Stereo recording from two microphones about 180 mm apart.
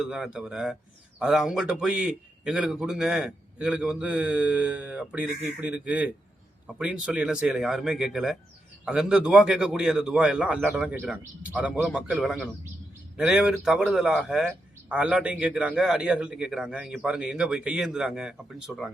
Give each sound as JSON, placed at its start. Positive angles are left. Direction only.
{"t": 0.0, "sound": "speech", "side_deg": -5}